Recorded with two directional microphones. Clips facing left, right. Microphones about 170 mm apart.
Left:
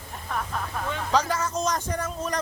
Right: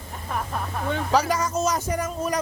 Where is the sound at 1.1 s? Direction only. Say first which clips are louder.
Right 2 dB; 10° right (ahead or behind).